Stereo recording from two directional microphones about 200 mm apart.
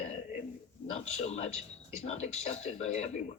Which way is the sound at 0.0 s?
35° left (ahead or behind).